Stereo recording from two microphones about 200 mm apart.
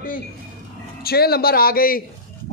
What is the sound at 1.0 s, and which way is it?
Speech, 50° left (ahead or behind).